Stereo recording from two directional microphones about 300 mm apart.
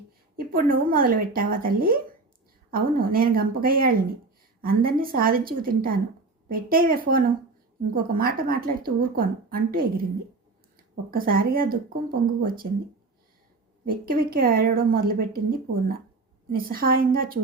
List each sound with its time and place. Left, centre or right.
0.3 s a woman's voice: right
11.1 s a woman's voice: right
13.8 s a woman's voice: right